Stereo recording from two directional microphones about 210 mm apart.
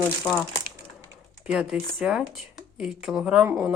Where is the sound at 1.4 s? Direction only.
5° right (ahead or behind).